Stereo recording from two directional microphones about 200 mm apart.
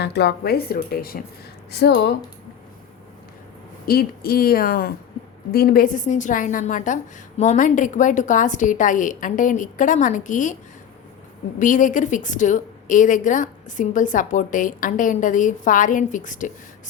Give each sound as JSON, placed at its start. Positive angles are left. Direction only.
{"t": 0.0, "sound": "a woman's voice", "side_deg": 55}
{"t": 3.8, "sound": "a woman's voice", "side_deg": 50}
{"t": 11.6, "sound": "a woman's voice", "side_deg": 40}